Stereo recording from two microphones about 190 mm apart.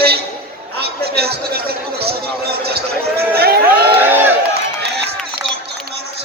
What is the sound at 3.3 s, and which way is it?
Speech, 55° right (ahead or behind).